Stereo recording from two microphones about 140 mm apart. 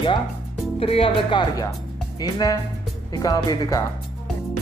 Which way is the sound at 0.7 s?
45° left (ahead or behind).